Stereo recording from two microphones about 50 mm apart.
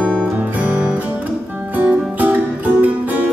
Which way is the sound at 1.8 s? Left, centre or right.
Right.